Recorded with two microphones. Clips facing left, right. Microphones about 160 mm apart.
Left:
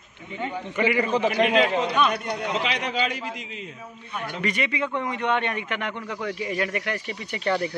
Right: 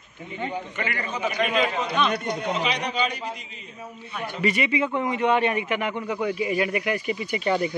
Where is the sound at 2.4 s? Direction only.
90° left.